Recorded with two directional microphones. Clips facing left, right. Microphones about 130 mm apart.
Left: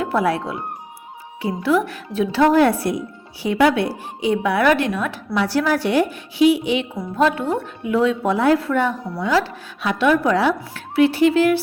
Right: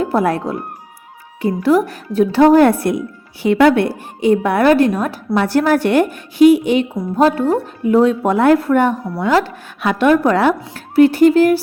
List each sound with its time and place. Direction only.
0.0 s a woman's voice: 40° right (ahead or behind)